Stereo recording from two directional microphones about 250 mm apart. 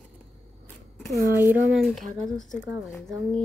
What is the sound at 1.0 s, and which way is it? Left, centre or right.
Speech, centre.